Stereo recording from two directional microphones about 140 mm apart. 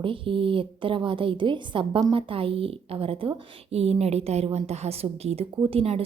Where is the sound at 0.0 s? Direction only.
40° right (ahead or behind).